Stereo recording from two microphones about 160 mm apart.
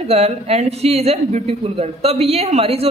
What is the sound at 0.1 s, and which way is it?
A woman's voice, 40° right (ahead or behind).